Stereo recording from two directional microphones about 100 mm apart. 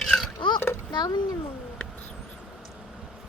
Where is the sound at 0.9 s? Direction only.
50° left (ahead or behind).